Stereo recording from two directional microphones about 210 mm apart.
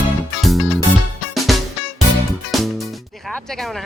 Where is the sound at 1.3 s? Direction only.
Centre (ahead or behind).